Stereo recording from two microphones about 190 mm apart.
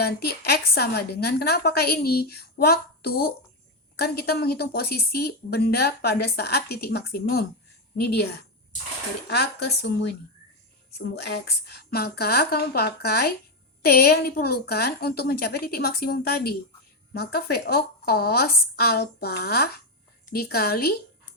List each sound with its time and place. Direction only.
0.0 s a woman's voice: 55° left (ahead or behind)